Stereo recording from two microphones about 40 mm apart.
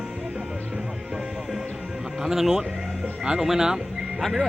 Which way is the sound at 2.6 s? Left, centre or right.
Centre.